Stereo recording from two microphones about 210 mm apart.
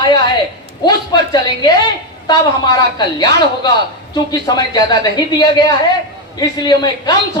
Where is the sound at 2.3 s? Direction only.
20° left (ahead or behind).